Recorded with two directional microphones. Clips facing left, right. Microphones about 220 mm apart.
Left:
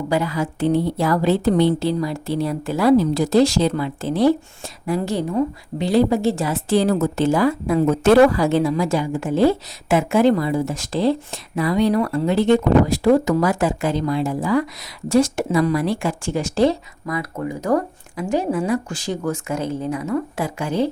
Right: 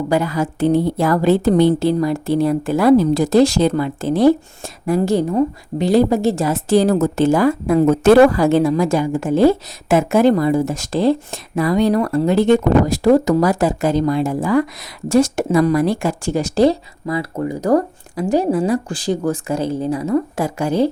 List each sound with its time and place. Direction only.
0.1 s a woman's voice: 45° right (ahead or behind)